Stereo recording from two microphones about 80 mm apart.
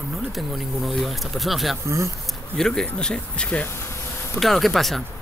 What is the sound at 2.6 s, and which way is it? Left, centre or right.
Speech, centre.